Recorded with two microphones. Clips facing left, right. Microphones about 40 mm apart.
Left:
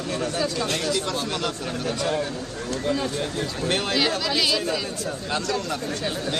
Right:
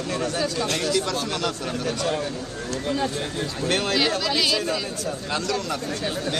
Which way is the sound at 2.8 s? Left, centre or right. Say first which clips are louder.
Even; centre.